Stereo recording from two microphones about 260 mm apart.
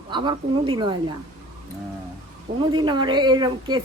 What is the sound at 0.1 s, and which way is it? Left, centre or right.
Speech, centre.